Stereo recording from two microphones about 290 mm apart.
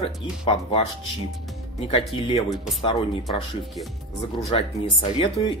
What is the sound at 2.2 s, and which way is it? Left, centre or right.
Speech, centre.